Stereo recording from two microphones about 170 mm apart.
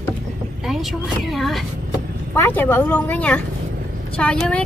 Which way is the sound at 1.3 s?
Centre (ahead or behind).